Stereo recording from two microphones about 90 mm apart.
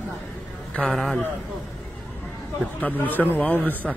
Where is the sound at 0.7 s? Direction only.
5° left (ahead or behind).